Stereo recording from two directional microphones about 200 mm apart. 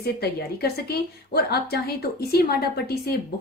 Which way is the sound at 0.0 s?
50° left (ahead or behind).